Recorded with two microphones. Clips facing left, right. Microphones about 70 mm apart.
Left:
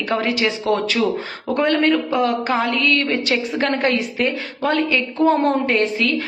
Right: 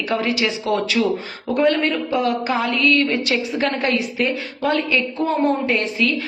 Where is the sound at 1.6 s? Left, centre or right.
Left.